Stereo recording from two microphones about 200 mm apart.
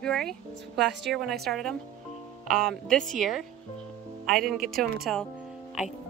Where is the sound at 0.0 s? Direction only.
5° left (ahead or behind).